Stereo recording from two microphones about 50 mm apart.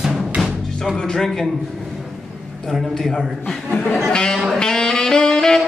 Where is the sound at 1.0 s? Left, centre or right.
Centre.